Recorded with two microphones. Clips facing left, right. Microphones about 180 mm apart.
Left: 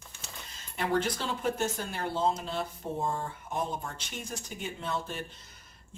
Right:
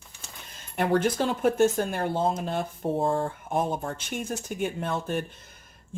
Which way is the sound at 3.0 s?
75° right (ahead or behind).